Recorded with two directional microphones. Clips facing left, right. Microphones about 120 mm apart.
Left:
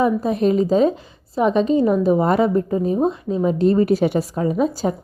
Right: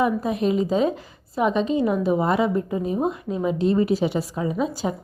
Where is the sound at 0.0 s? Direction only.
35° left (ahead or behind).